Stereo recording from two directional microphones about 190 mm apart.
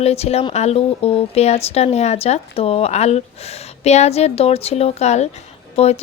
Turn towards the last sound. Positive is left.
turn(degrees=35)  # may be behind; listen again after turning